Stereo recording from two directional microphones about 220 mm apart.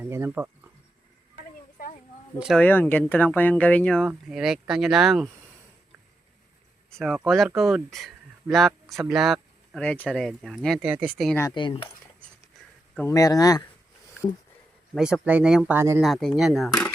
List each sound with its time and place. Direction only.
0.0 s speech: 10° right (ahead or behind)
2.4 s speech: 5° left (ahead or behind)
6.9 s speech: centre (ahead or behind)
11.3 s speech: 20° left (ahead or behind)
12.9 s speech: 10° left (ahead or behind)
14.9 s speech: 5° right (ahead or behind)
16.0 s speech: centre (ahead or behind)